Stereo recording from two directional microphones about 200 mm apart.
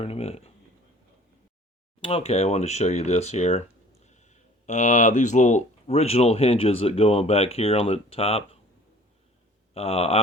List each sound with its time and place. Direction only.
0.0 s speech: 30° left (ahead or behind)
2.0 s speech: 30° left (ahead or behind)
9.7 s speech: 30° left (ahead or behind)